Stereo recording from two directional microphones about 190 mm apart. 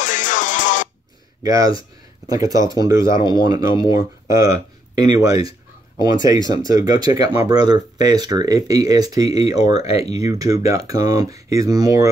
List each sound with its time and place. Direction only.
0.0 s music: 40° left (ahead or behind)
1.4 s speech: 20° right (ahead or behind)